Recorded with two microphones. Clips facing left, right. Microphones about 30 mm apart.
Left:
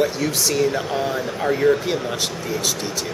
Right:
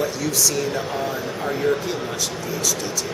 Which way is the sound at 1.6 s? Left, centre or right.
Centre.